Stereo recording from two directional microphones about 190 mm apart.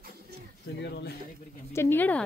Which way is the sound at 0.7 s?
65° left (ahead or behind).